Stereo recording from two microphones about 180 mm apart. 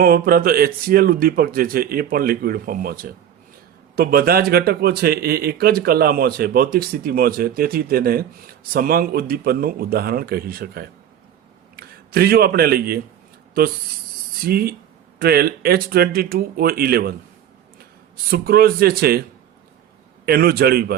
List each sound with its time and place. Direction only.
0.0 s a man's voice: 55° right (ahead or behind)
14.4 s speech: 55° right (ahead or behind)
18.3 s speech: 60° right (ahead or behind)
20.2 s speech: 60° right (ahead or behind)